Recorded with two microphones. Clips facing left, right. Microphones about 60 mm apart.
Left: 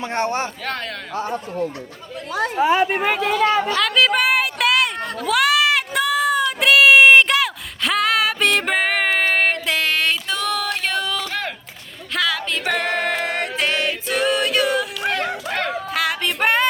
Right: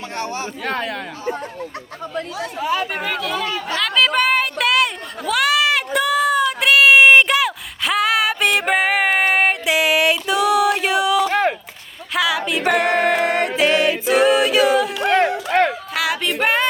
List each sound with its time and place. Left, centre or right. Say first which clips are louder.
0.1 s speech: left 5 dB; left
0.6 s speech: right 4 dB; centre
2.6 s speech: left 5 dB; left
3.8 s a sound: even; centre
11.3 s a sound: right 9 dB; right
12.1 s music: right 3 dB; centre